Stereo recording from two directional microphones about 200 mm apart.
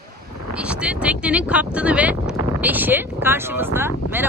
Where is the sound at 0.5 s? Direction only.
5° right (ahead or behind).